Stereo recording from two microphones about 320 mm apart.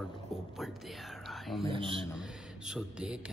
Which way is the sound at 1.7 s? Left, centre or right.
Centre.